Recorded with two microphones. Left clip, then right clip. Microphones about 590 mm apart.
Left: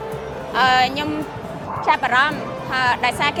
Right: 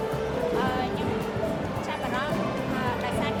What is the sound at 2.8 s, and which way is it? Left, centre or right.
Speech, left.